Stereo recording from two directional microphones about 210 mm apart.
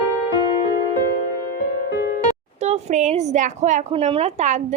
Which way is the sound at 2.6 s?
30° right (ahead or behind).